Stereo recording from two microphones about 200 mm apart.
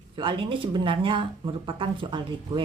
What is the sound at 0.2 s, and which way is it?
Speech, 25° right (ahead or behind).